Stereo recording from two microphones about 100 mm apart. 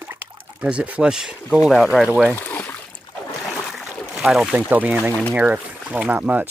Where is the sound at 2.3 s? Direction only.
20° left (ahead or behind).